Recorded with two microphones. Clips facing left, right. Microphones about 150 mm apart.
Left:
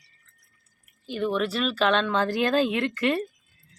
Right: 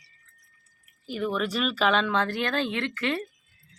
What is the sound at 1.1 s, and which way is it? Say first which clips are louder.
Speech: left 2 dB; centre (ahead or behind).